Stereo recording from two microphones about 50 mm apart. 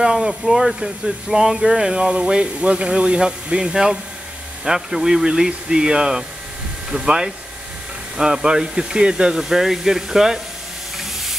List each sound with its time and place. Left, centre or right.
0.0 s speech: centre